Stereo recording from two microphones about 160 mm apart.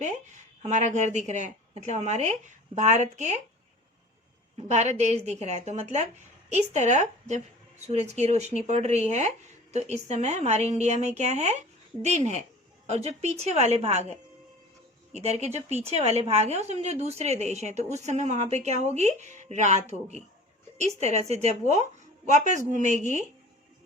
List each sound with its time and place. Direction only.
0.6 s a woman's voice: 50° right (ahead or behind)
4.7 s a woman's voice: 45° right (ahead or behind)